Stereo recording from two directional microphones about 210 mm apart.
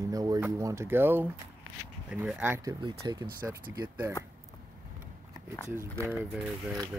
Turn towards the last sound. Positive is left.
turn(degrees=-5)  # may be behind; listen again after turning